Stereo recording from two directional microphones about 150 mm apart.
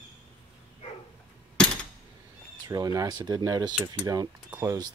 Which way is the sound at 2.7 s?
25° right (ahead or behind).